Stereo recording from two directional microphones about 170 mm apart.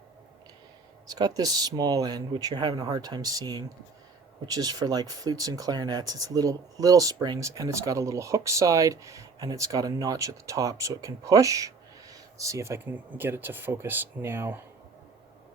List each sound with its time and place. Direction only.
1.0 s speech: 20° right (ahead or behind)